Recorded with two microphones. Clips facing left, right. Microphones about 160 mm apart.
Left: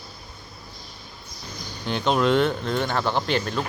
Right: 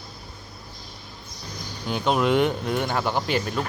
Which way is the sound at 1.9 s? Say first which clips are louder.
Left 1 dB; 5° right (ahead or behind).